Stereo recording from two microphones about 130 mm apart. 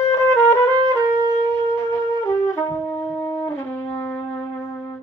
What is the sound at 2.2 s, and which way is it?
Wind instrument, 20° left (ahead or behind).